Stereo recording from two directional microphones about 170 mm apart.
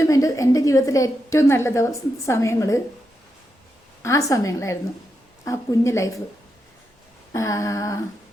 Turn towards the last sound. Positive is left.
turn(degrees=20)  # may be behind; listen again after turning